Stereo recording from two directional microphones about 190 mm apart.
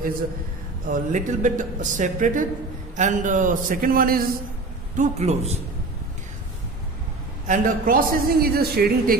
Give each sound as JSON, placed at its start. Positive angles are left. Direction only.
{"t": 0.8, "sound": "a man's voice", "side_deg": -45}
{"t": 4.9, "sound": "speech", "side_deg": -40}
{"t": 7.4, "sound": "a man's voice", "side_deg": -45}